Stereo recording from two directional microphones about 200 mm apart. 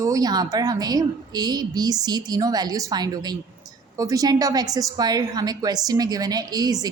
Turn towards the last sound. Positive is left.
turn(degrees=-20)  # may be behind; listen again after turning